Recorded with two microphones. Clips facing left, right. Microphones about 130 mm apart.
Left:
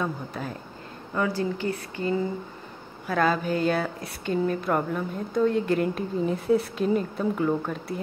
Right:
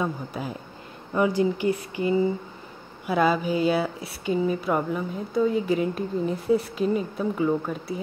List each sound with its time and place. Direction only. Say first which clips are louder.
0.0 s speech: right 2 dB; 10° right (ahead or behind)